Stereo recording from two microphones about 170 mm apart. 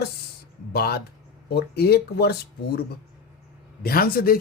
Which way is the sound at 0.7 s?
65° left (ahead or behind).